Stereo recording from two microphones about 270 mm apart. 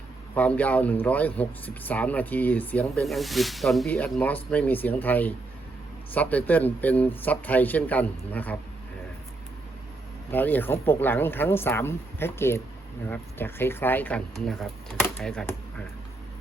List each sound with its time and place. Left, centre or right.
0.3 s a man's voice: centre
10.3 s a man's voice: centre